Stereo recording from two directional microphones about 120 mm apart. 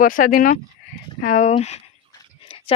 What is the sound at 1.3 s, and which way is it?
Speech, 90° left.